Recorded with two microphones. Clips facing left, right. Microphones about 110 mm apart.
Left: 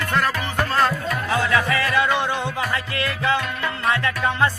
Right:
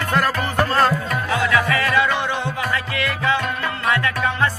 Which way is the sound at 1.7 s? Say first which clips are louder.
Right 1 dB; 30° left (ahead or behind).